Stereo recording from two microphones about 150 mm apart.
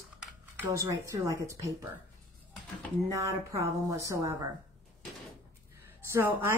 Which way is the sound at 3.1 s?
20° right (ahead or behind).